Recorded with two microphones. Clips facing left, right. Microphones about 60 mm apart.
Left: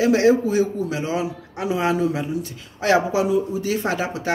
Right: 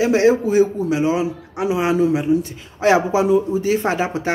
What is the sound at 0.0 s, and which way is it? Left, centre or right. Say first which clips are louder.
Speech: right 1 dB; right.